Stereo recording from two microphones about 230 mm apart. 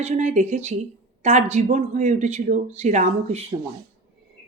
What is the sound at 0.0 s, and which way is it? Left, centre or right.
Speech, right.